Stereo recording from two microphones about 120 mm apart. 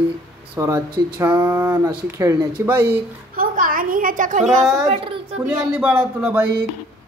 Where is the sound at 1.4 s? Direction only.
15° right (ahead or behind).